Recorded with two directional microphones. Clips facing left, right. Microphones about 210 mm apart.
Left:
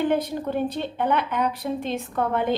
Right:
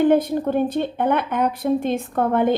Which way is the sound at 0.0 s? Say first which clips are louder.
Right 6 dB; 50° right (ahead or behind).